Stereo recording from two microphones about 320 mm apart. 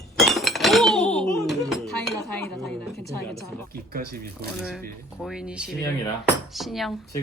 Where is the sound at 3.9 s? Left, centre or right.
Right.